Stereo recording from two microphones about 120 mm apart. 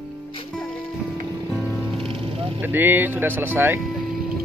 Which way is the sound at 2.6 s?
15° right (ahead or behind).